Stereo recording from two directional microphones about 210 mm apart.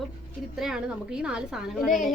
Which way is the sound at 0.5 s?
Centre (ahead or behind).